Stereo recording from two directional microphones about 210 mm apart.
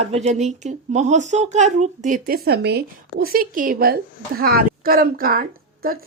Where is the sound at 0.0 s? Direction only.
30° right (ahead or behind).